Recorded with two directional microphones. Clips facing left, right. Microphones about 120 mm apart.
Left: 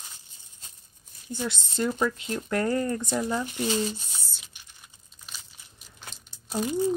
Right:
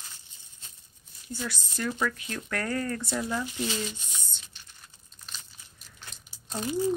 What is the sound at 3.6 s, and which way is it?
Speech, 35° left (ahead or behind).